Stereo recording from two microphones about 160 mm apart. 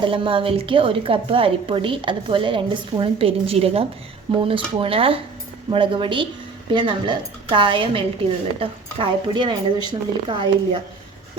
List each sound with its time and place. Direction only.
0.0 s a woman's voice: 35° right (ahead or behind)